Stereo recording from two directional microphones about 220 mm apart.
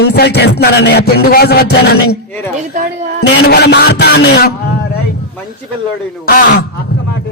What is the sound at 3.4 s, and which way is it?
Music, 50° left (ahead or behind).